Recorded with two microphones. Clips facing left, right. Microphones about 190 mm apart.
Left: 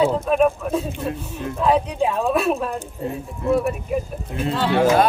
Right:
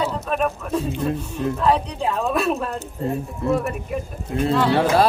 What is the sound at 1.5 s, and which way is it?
Speech, 10° left (ahead or behind).